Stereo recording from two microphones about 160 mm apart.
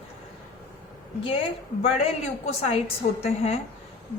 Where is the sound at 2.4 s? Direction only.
40° left (ahead or behind).